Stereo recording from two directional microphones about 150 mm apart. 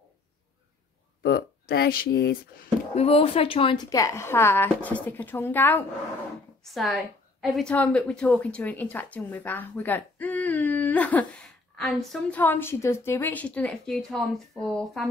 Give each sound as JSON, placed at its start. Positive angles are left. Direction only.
{"t": 1.2, "sound": "speech", "side_deg": 90}
{"t": 2.9, "sound": "speech", "side_deg": 40}
{"t": 3.9, "sound": "a woman's voice", "side_deg": 20}
{"t": 6.7, "sound": "a woman's voice", "side_deg": 0}
{"t": 12.4, "sound": "a woman's voice", "side_deg": 15}